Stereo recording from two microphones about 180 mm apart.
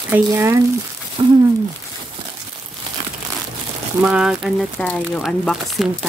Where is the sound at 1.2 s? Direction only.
25° right (ahead or behind).